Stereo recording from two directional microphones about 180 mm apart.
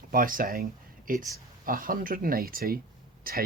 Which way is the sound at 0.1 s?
50° right (ahead or behind).